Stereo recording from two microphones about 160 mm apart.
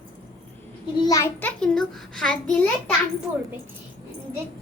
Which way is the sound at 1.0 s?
20° left (ahead or behind).